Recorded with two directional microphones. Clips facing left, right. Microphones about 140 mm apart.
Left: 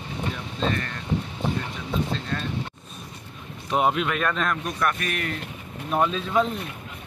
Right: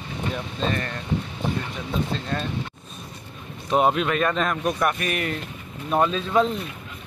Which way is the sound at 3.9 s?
Centre (ahead or behind).